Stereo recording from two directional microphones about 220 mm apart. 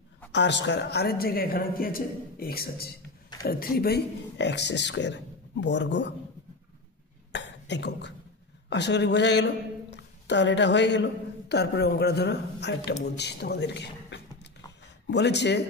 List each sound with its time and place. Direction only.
0.3 s speech: 55° left (ahead or behind)
7.3 s cough: 50° left (ahead or behind)
8.6 s speech: 50° left (ahead or behind)